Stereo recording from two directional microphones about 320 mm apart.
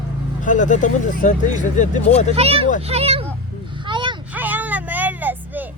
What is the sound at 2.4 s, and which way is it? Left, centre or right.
Speech, centre.